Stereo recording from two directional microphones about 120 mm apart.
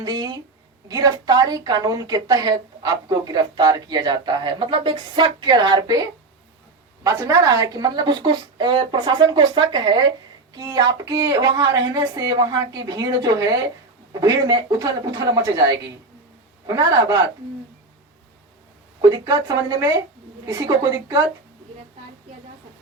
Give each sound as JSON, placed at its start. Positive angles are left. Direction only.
{"t": 0.0, "sound": "a woman's voice", "side_deg": -35}
{"t": 16.6, "sound": "a woman's voice", "side_deg": -30}
{"t": 19.0, "sound": "a woman's voice", "side_deg": -30}